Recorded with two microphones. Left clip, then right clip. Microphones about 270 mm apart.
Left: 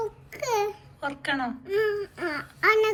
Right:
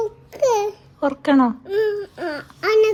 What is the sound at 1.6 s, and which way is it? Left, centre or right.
Baby cry, centre.